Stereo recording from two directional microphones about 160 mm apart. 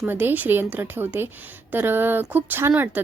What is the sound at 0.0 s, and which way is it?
A woman's voice, 10° right (ahead or behind).